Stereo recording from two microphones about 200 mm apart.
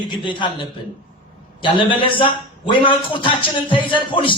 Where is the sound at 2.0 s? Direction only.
25° left (ahead or behind).